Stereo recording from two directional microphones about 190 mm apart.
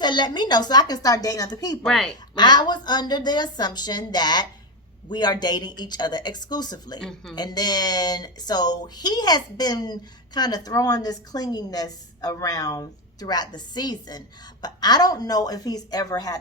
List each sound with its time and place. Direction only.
0.0 s speech: 25° left (ahead or behind)
1.8 s speech: centre (ahead or behind)
2.3 s speech: 25° left (ahead or behind)